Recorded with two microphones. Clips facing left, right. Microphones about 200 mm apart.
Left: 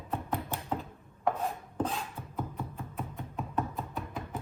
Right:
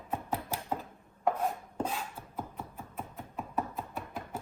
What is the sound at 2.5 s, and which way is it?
Music, centre (ahead or behind).